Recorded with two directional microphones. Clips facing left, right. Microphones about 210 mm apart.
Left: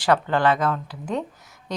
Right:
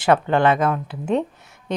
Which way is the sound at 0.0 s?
20° right (ahead or behind).